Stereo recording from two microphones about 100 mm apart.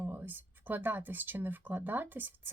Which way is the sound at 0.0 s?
20° right (ahead or behind).